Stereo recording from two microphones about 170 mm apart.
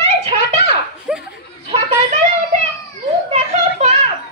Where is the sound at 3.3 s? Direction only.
40° right (ahead or behind).